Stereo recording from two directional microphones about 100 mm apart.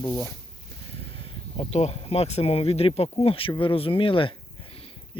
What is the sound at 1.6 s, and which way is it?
Speech, 90° left.